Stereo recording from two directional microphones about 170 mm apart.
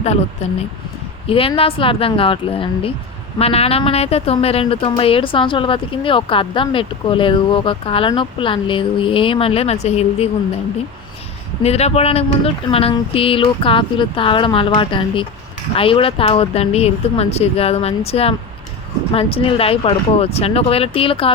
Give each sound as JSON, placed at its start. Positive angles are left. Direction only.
{"t": 0.4, "sound": "a woman's voice", "side_deg": 35}
{"t": 11.6, "sound": "a woman's voice", "side_deg": 40}